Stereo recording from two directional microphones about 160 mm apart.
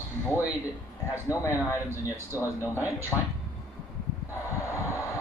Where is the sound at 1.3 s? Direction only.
15° left (ahead or behind).